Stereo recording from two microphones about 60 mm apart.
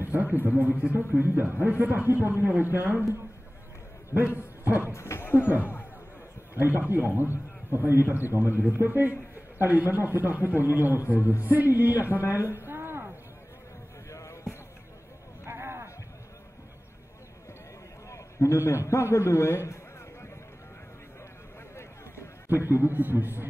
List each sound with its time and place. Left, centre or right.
0.1 s a man's voice: right
4.1 s a man's voice: right
4.8 s speech: left
6.6 s a man's voice: right
12.3 s a sound: right
14.1 s basketball bounce: left
15.4 s a sound: right
18.1 s a sound: left
21.7 s run: left
22.7 s a man's voice: right